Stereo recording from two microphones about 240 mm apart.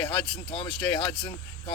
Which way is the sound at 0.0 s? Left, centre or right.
Centre.